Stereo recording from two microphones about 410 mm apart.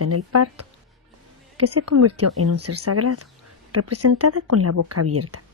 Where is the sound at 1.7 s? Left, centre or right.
Right.